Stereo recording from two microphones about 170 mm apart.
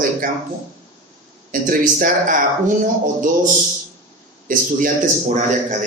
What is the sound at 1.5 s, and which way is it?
Speech, 55° right (ahead or behind).